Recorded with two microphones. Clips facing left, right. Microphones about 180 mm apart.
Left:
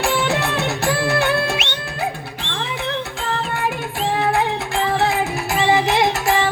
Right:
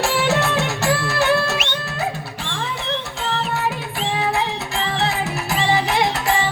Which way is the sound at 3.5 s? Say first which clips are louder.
Even; 50° left (ahead or behind).